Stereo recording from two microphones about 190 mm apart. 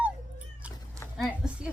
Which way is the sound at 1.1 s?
Centre (ahead or behind).